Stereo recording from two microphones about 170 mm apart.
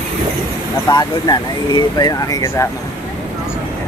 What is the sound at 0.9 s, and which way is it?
Speech, 25° left (ahead or behind).